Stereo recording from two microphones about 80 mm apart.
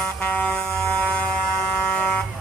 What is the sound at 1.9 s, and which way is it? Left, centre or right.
Vehicle, centre.